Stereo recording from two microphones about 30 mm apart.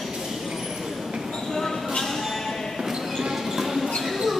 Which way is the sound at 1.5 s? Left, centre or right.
Centre.